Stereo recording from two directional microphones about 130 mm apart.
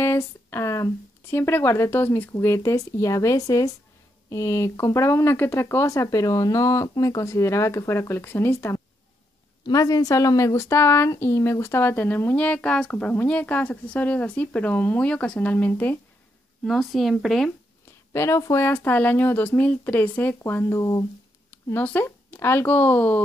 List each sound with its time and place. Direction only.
0.0 s speech: 20° left (ahead or behind)
16.6 s speech: centre (ahead or behind)
18.1 s speech: 20° left (ahead or behind)